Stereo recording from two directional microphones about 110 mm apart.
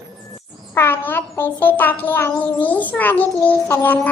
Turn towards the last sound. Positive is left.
turn(degrees=20)  # may be behind; listen again after turning